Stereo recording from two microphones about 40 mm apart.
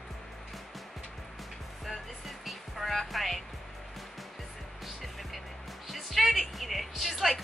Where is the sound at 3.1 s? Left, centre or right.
Centre.